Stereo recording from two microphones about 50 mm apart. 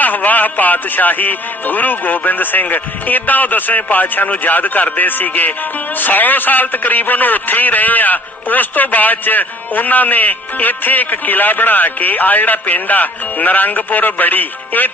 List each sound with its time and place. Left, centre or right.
0.0 s speech: left